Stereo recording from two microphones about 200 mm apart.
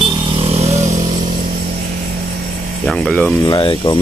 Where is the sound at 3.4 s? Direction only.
20° left (ahead or behind).